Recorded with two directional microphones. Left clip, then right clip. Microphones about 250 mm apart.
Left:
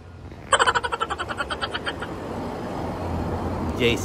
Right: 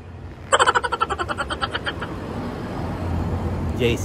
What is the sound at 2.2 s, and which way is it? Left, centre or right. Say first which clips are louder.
Vehicle: even; left.